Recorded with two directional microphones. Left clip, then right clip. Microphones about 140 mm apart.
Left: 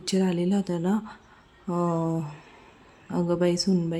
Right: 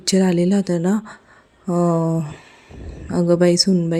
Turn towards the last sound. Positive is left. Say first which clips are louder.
# right 9 dB
turn(degrees=-35)  # may be behind; listen again after turning